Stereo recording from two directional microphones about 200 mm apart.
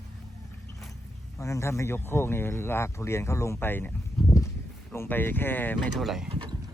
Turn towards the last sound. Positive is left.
turn(degrees=-25)  # may be behind; listen again after turning